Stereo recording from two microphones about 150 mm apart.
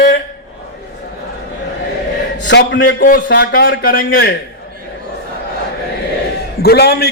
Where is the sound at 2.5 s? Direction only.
65° left (ahead or behind).